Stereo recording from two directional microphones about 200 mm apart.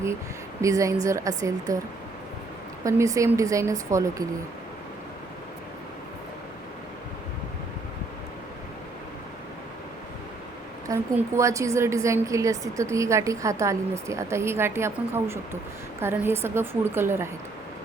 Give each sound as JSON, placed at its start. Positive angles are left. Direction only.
{"t": 0.6, "sound": "a woman's voice", "side_deg": -15}
{"t": 2.8, "sound": "a woman's voice", "side_deg": -15}
{"t": 10.8, "sound": "a woman's voice", "side_deg": -15}